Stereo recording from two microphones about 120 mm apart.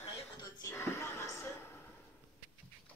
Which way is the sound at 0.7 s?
20° left (ahead or behind).